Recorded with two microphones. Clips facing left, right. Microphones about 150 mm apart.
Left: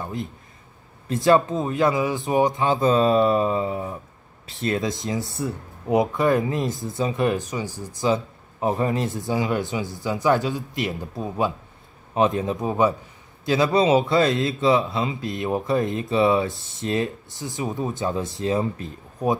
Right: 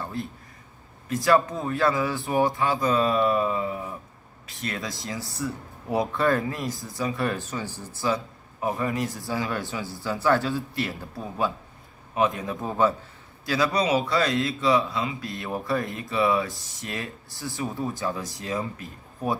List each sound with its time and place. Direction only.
0.0 s speech: 20° left (ahead or behind)